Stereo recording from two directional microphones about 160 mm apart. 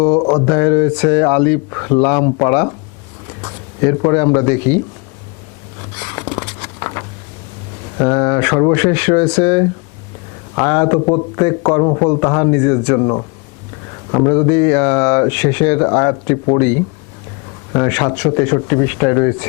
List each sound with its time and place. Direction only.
0.0 s speech: 25° left (ahead or behind)
3.8 s speech: 20° left (ahead or behind)
6.1 s a sound: 20° left (ahead or behind)
7.9 s speech: 20° left (ahead or behind)